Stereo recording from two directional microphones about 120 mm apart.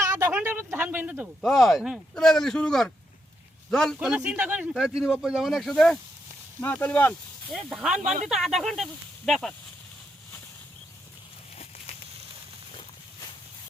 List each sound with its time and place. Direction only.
0.0 s a sound: 25° right (ahead or behind)
0.3 s speech: 15° right (ahead or behind)
1.4 s a man's voice: centre (ahead or behind)
3.9 s speech: 10° right (ahead or behind)
6.6 s speech: 15° left (ahead or behind)
7.5 s speech: 5° right (ahead or behind)
7.9 s speech: 75° right (ahead or behind)
8.3 s speech: centre (ahead or behind)